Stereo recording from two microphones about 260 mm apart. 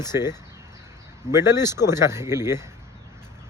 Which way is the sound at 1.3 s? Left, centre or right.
Centre.